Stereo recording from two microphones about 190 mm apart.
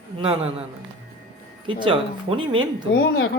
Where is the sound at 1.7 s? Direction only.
25° right (ahead or behind).